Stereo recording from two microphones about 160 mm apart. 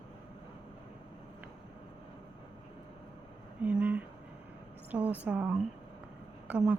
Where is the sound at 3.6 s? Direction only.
10° right (ahead or behind).